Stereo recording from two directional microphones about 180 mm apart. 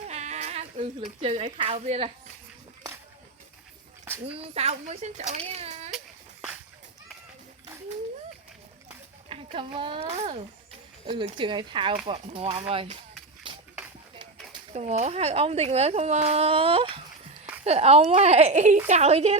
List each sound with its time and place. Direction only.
0.1 s speech: 40° right (ahead or behind)
4.4 s speech: 35° right (ahead or behind)
5.5 s baby cry: 35° right (ahead or behind)
9.3 s a child's voice: 30° right (ahead or behind)
13.5 s shuffle: 25° right (ahead or behind)
14.7 s speech: 40° right (ahead or behind)